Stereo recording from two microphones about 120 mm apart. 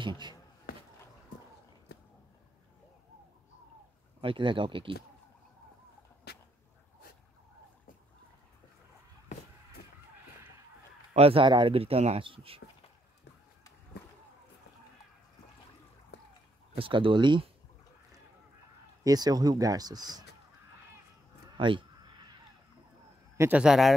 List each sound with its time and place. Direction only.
4.2 s speech: 45° right (ahead or behind)
11.1 s speech: 50° right (ahead or behind)
12.2 s speech: 45° right (ahead or behind)
16.7 s speech: 45° right (ahead or behind)
19.0 s speech: 35° right (ahead or behind)
21.5 s a sound: 40° right (ahead or behind)
23.5 s a man's voice: 5° right (ahead or behind)